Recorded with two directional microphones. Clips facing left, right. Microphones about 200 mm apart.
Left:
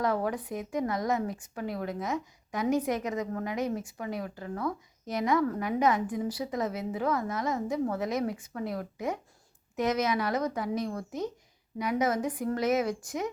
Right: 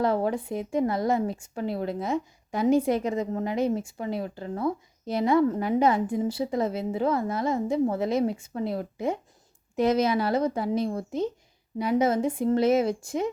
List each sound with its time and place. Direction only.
0.0 s speech: 30° right (ahead or behind)